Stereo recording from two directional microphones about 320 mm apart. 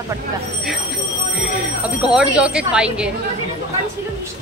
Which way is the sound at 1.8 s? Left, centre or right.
Centre.